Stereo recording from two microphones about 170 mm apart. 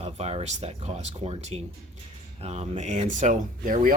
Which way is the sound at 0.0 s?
40° right (ahead or behind).